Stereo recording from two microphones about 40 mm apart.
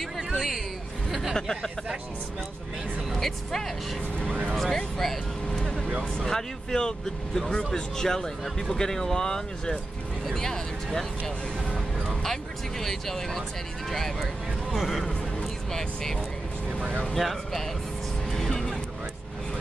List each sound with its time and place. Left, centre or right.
0.3 s speech: centre
1.3 s a man's voice: centre
3.1 s speech: centre
4.7 s a man's voice: centre
5.5 s vehicle: centre
6.1 s a man's voice: centre
12.8 s a man's voice: centre
14.2 s speech: centre
15.7 s a man's voice: centre
18.3 s music: centre